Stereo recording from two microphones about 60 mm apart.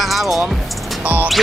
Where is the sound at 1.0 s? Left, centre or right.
Right.